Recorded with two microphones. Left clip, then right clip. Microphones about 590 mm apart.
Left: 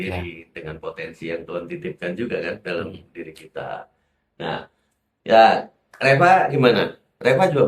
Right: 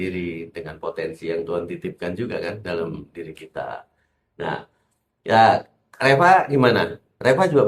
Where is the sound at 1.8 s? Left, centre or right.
Right.